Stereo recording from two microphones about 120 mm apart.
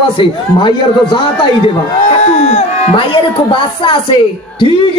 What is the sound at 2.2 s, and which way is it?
Speech, 65° left (ahead or behind).